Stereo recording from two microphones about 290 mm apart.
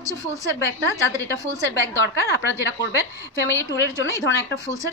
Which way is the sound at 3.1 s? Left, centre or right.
Centre.